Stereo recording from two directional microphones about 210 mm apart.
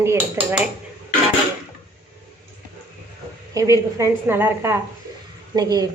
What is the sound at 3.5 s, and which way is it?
A woman's voice, 15° right (ahead or behind).